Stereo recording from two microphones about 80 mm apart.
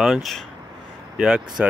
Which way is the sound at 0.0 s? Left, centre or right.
Centre.